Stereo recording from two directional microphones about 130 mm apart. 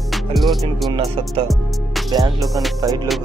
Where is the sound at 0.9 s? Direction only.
45° right (ahead or behind).